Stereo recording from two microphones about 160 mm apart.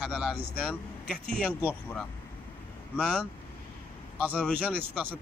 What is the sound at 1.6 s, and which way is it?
Speech, 15° left (ahead or behind).